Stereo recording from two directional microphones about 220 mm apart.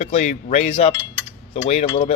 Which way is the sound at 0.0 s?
30° left (ahead or behind).